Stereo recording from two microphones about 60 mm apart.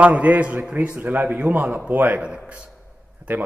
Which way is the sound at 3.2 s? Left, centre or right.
Right.